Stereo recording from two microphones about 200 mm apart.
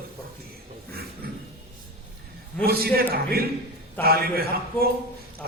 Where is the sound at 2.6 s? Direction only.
50° right (ahead or behind).